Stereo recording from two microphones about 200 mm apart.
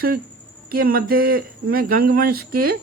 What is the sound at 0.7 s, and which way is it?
Speech, 45° right (ahead or behind).